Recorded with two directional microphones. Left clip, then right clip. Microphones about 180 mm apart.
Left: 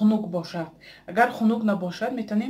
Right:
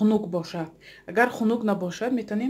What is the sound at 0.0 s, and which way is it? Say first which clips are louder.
Speech: right 1 dB; 50° right (ahead or behind).